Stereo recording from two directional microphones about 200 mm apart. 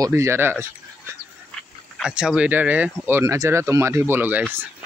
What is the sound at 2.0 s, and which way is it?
Speech, 5° right (ahead or behind).